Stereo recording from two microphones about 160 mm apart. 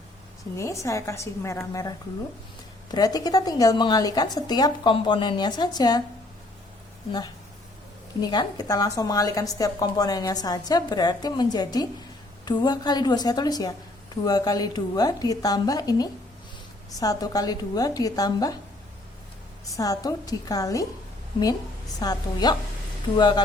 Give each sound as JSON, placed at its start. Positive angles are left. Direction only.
{"t": 0.5, "sound": "a woman's voice", "side_deg": 20}
{"t": 8.2, "sound": "a woman's voice", "side_deg": 25}
{"t": 19.6, "sound": "a woman's voice", "side_deg": 20}
{"t": 21.9, "sound": "a woman's voice", "side_deg": 25}